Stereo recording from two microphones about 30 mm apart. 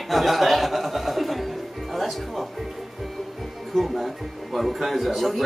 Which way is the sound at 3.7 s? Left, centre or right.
Centre.